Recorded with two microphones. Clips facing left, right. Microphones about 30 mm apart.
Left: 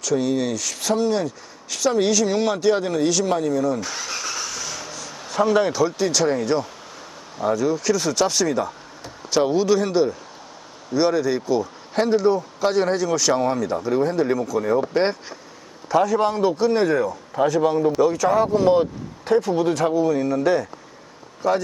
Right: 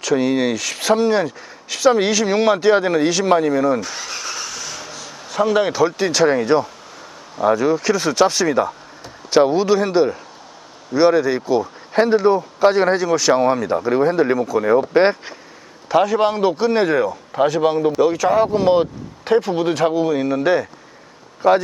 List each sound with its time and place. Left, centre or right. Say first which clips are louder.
0.0 s speech: right 4 dB; right
3.8 s vehicle: right 2 dB; centre; by 6.7 s right
7.4 s speech: right 4 dB; right
14.3 s a man's voice: right 5 dB; right
18.0 s speech: right 4 dB; right